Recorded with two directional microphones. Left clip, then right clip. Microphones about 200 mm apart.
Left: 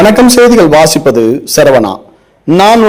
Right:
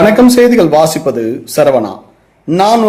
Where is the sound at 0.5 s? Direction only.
40° left (ahead or behind).